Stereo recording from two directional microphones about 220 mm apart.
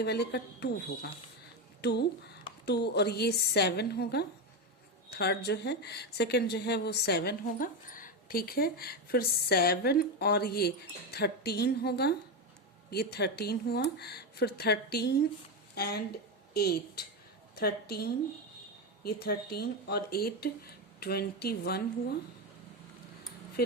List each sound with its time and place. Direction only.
0.0 s a woman's voice: 45° left (ahead or behind)
23.6 s speech: 45° left (ahead or behind)